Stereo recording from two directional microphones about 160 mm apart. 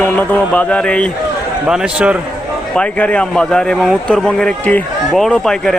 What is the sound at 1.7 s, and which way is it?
Speech, 5° right (ahead or behind).